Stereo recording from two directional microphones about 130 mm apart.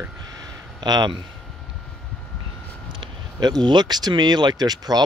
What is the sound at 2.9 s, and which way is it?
Speech, 35° right (ahead or behind).